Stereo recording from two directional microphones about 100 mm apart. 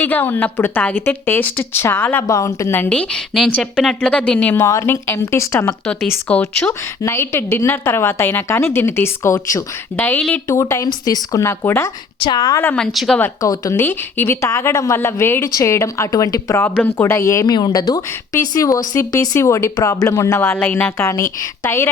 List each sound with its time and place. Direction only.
0.0 s a woman's voice: 20° left (ahead or behind)
2.2 s a woman's voice: 30° left (ahead or behind)
2.9 s speech: 10° left (ahead or behind)
4.5 s a woman's voice: 30° left (ahead or behind)
5.8 s speech: 10° left (ahead or behind)
7.0 s a woman's voice: 25° left (ahead or behind)
10.0 s speech: 10° left (ahead or behind)
10.5 s a woman's voice: 30° left (ahead or behind)
12.2 s a woman's voice: 45° left (ahead or behind)
12.7 s speech: centre (ahead or behind)
13.4 s a woman's voice: 30° left (ahead or behind)